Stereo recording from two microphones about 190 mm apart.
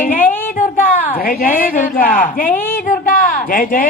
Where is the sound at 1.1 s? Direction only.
50° left (ahead or behind).